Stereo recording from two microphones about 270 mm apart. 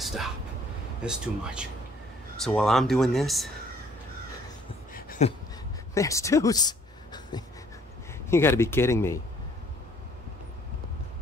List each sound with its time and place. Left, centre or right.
0.0 s vehicle: centre
1.0 s speech: centre
5.2 s a sound: left
5.9 s speech: centre